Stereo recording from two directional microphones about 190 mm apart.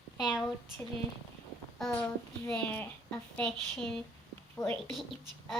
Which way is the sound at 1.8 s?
10° left (ahead or behind).